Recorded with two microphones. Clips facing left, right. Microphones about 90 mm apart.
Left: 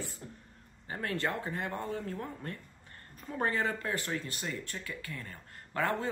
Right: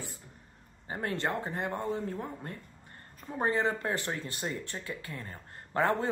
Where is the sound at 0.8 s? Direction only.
25° right (ahead or behind).